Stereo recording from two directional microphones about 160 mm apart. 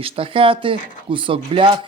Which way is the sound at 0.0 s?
35° right (ahead or behind).